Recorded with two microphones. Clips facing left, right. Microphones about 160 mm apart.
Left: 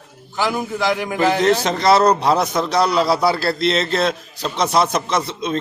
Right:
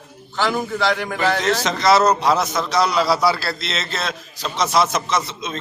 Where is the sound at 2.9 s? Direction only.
50° left (ahead or behind).